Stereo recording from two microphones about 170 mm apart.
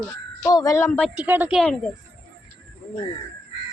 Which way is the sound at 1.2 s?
10° right (ahead or behind).